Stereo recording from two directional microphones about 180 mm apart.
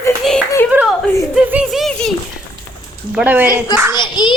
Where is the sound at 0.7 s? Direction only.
10° right (ahead or behind).